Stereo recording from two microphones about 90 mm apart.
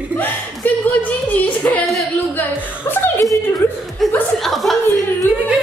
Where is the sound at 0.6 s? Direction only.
20° left (ahead or behind).